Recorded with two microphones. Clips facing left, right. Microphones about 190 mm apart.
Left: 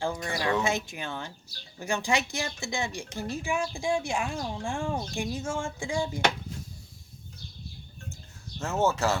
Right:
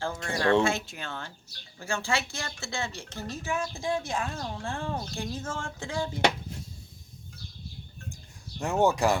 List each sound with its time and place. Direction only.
0.0 s speech: 15° left (ahead or behind)
8.5 s speech: 15° right (ahead or behind)